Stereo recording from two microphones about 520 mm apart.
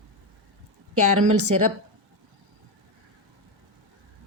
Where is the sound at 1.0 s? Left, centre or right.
Right.